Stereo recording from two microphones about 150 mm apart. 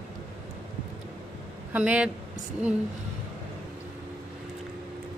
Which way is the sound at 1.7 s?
10° right (ahead or behind).